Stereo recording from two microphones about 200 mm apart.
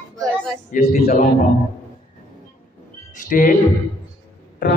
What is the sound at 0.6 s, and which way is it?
Speech, 50° left (ahead or behind).